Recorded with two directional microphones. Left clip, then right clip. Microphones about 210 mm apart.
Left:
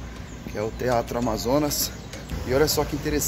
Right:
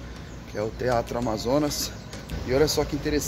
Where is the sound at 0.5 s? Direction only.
Centre (ahead or behind).